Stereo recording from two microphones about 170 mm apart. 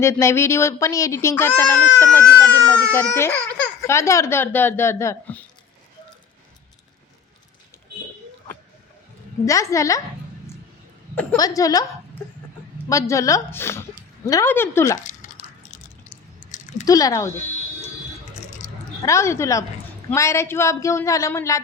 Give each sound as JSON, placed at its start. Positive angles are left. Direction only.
{"t": 0.0, "sound": "speech", "side_deg": 15}
{"t": 9.5, "sound": "a woman's voice", "side_deg": 20}
{"t": 11.1, "sound": "a woman's voice", "side_deg": 10}
{"t": 11.3, "sound": "a woman's voice", "side_deg": 20}
{"t": 12.9, "sound": "speech", "side_deg": 20}
{"t": 15.4, "sound": "a sound", "side_deg": 50}
{"t": 16.8, "sound": "a woman's voice", "side_deg": 20}
{"t": 18.6, "sound": "a sound", "side_deg": 45}
{"t": 19.0, "sound": "speech", "side_deg": 15}